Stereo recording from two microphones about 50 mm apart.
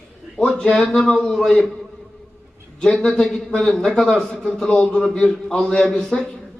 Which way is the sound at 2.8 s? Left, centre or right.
Centre.